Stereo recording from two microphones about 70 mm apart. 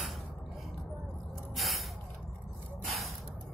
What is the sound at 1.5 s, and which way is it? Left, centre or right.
Snort, centre.